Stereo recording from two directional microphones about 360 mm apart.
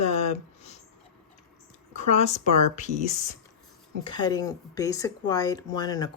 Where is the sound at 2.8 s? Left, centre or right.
Centre.